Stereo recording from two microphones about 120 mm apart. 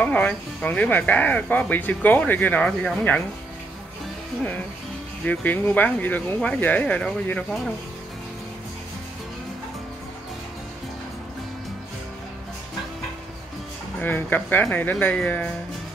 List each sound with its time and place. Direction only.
0.0 s speech: 10° left (ahead or behind)
5.2 s speech: 15° left (ahead or behind)
13.9 s speech: 15° left (ahead or behind)